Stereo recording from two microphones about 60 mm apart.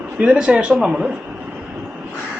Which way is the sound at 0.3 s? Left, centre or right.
Centre.